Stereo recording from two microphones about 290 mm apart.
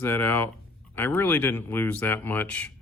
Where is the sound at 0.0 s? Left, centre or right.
Centre.